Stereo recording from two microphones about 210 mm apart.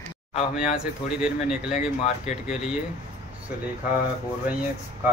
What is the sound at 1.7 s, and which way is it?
Speech, 35° left (ahead or behind).